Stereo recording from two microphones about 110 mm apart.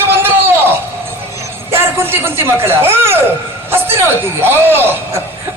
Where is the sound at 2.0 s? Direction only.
20° right (ahead or behind).